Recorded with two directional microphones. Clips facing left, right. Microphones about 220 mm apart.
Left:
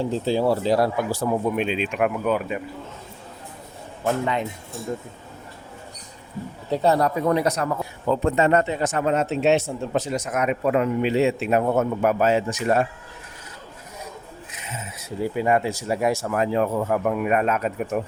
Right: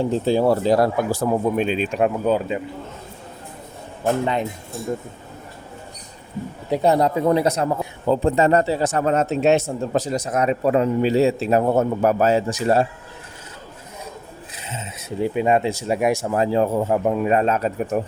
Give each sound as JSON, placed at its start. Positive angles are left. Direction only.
{"t": 0.0, "sound": "speech", "side_deg": -55}
{"t": 2.0, "sound": "speech", "side_deg": -30}
{"t": 6.7, "sound": "a man's voice", "side_deg": -15}
{"t": 14.5, "sound": "speech", "side_deg": -30}